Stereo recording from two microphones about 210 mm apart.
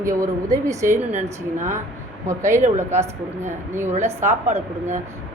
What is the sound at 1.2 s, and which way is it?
Speech, 35° right (ahead or behind).